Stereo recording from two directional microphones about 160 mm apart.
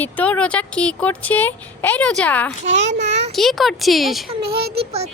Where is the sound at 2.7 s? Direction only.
45° right (ahead or behind).